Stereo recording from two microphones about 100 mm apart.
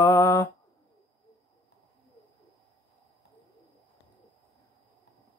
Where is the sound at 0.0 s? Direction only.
20° left (ahead or behind).